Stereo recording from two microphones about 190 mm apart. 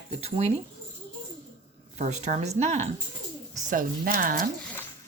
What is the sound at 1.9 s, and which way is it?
Speech, 35° right (ahead or behind).